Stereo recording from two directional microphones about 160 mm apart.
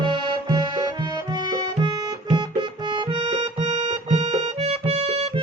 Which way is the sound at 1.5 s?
25° right (ahead or behind).